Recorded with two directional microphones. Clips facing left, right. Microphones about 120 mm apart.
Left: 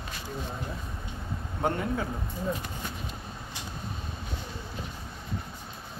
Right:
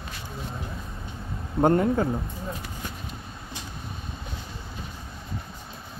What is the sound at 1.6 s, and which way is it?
Speech, 45° right (ahead or behind).